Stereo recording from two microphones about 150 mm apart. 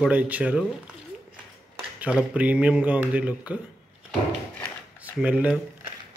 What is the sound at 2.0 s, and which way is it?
Speech, 10° right (ahead or behind).